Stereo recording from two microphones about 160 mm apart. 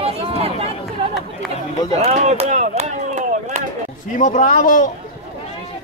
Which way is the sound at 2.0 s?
40° right (ahead or behind).